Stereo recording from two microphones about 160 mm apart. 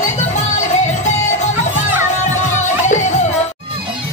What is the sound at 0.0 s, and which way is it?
Music, 45° left (ahead or behind).